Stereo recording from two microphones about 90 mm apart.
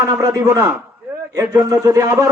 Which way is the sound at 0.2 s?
40° right (ahead or behind).